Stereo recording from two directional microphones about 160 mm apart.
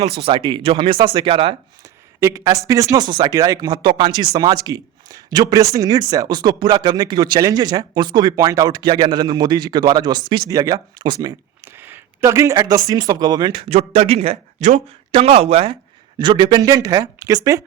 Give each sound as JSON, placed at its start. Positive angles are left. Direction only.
{"t": 0.2, "sound": "speech", "side_deg": -35}
{"t": 2.2, "sound": "speech", "side_deg": -20}
{"t": 13.7, "sound": "speech", "side_deg": -40}